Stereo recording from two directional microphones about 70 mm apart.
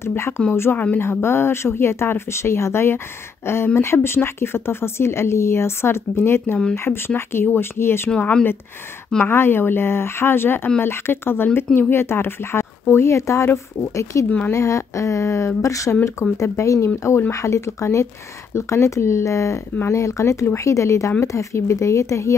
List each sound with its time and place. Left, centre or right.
0.0 s speech: left
8.2 s speech: centre
9.2 s speech: left